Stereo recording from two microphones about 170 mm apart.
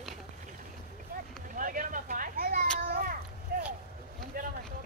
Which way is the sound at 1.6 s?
55° right (ahead or behind).